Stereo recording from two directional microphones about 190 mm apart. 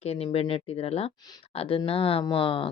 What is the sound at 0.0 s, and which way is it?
Speech, 30° left (ahead or behind).